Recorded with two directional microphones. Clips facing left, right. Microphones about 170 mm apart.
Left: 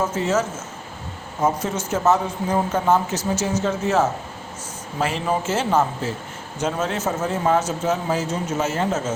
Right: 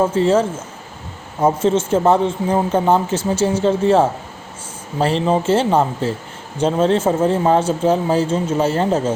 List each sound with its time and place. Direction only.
0.0 s speech: 30° right (ahead or behind)